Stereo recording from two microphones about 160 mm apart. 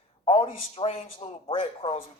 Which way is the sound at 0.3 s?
35° left (ahead or behind).